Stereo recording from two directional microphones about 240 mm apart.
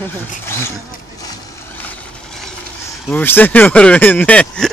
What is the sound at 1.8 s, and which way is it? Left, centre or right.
Vehicle, centre.